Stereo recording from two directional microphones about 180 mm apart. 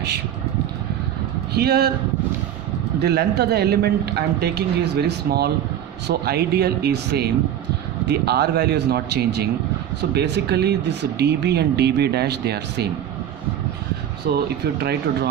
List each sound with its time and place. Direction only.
1.5 s speech: 60° right (ahead or behind)
3.0 s speech: 65° right (ahead or behind)
14.3 s speech: 60° right (ahead or behind)